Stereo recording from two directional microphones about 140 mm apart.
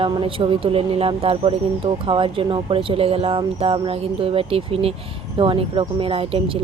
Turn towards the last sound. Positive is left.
turn(degrees=-40)  # may be behind; listen again after turning